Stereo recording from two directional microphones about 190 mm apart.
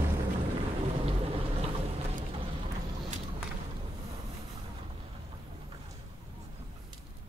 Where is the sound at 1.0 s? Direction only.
30° right (ahead or behind).